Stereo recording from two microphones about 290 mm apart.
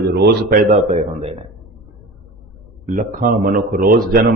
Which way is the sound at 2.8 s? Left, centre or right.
Right.